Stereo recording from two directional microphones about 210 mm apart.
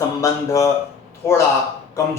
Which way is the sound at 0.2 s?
15° left (ahead or behind).